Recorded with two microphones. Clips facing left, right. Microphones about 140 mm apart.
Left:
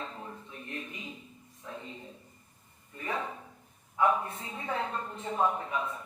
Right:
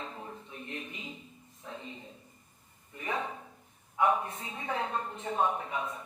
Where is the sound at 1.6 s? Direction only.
25° right (ahead or behind).